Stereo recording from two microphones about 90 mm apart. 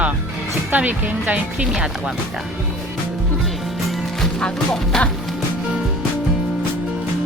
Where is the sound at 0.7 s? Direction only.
20° right (ahead or behind).